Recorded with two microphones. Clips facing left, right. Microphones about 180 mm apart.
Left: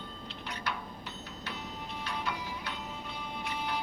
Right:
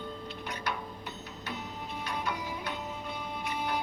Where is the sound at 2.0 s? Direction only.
50° right (ahead or behind).